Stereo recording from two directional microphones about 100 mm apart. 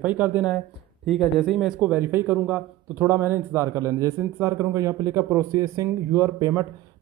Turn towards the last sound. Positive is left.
turn(degrees=-35)  # may be behind; listen again after turning